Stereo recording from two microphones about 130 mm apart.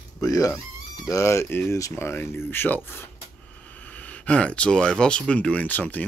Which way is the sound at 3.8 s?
10° left (ahead or behind).